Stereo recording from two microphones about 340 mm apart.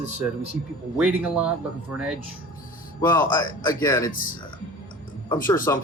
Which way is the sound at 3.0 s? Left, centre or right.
Centre.